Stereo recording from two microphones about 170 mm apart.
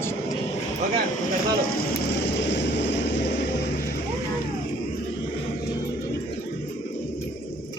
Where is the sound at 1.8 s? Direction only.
80° left.